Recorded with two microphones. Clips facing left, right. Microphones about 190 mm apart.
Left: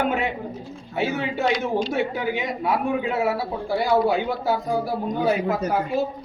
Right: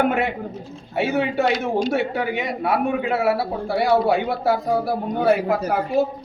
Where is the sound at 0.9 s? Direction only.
65° right (ahead or behind).